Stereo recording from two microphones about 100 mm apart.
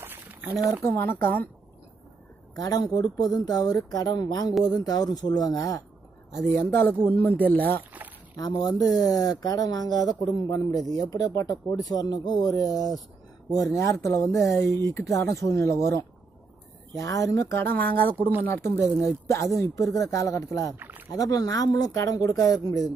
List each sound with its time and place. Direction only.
0.0 s a sound: 20° right (ahead or behind)
0.8 s speech: 20° left (ahead or behind)
2.5 s speech: 40° left (ahead or behind)
6.5 s speech: 20° left (ahead or behind)
8.4 s speech: 40° left (ahead or behind)